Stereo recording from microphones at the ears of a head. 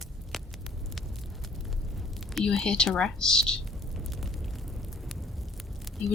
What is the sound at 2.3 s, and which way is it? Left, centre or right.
Speech, left.